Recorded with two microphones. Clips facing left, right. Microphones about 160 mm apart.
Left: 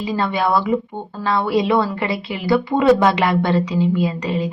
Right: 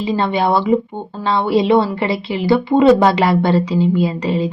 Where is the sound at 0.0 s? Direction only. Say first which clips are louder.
Right 3 dB; 25° right (ahead or behind).